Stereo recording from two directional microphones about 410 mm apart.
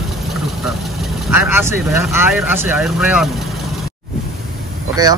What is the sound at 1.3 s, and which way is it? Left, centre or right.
Speech, centre.